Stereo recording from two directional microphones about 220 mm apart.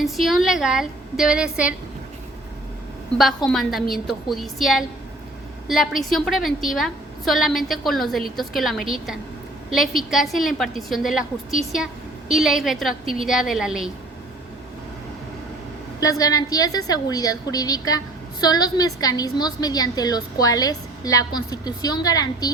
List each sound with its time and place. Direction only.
0.0 s a woman's voice: centre (ahead or behind)
3.2 s a woman's voice: centre (ahead or behind)
12.3 s a woman's voice: centre (ahead or behind)
16.0 s a woman's voice: 15° left (ahead or behind)